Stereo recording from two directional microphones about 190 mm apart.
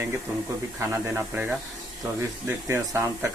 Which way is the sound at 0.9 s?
10° right (ahead or behind).